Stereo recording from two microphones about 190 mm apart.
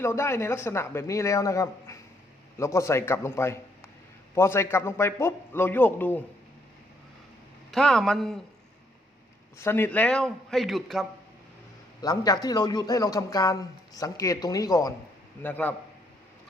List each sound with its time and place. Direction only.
0.0 s speech: 15° left (ahead or behind)
7.7 s a man's voice: centre (ahead or behind)
9.6 s a man's voice: 10° left (ahead or behind)
12.0 s speech: 20° left (ahead or behind)